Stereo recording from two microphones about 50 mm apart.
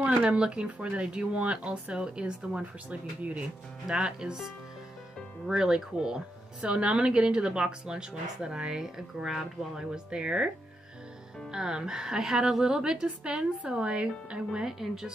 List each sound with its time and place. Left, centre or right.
0.0 s speech: right
3.8 s speech: centre
5.5 s speech: centre
11.5 s speech: centre
14.5 s speech: centre